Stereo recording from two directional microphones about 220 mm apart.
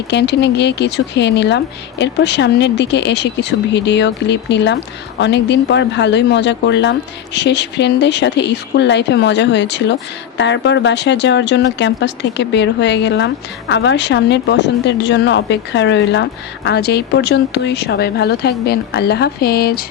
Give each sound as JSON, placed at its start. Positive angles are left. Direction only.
{"t": 0.1, "sound": "speech", "side_deg": 50}